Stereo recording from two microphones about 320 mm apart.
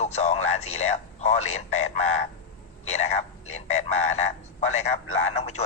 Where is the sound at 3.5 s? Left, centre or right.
Left.